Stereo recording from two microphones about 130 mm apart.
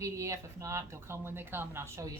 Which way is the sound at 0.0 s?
25° right (ahead or behind).